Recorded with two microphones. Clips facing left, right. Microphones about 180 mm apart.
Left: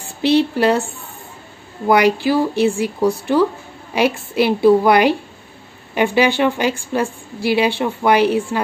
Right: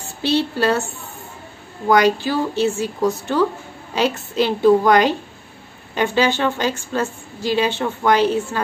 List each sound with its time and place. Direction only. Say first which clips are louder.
0.2 s a woman's voice: left 4 dB; 15° left (ahead or behind)
1.9 s a woman's voice: left 2 dB; 10° left (ahead or behind)